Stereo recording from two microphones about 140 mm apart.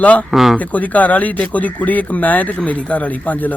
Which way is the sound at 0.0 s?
10° left (ahead or behind).